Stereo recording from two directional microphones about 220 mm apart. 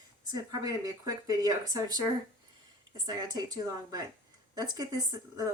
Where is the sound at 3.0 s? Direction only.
20° right (ahead or behind).